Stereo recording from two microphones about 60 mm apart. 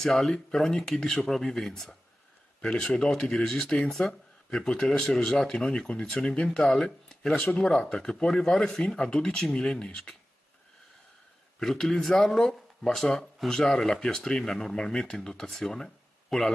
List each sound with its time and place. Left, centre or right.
0.0 s speech: centre
11.6 s speech: centre